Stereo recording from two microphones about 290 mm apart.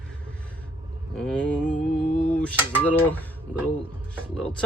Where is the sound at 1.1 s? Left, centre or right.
Centre.